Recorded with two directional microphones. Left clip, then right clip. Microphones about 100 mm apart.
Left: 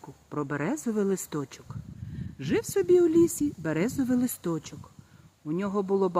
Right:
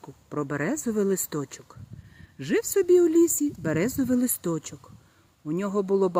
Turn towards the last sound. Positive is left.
turn(degrees=-45)  # may be behind; listen again after turning